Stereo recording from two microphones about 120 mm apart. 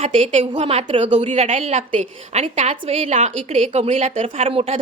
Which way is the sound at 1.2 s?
70° right (ahead or behind).